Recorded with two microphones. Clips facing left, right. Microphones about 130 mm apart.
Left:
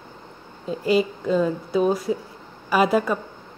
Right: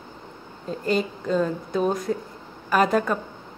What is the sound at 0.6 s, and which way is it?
A woman's voice, 5° left (ahead or behind).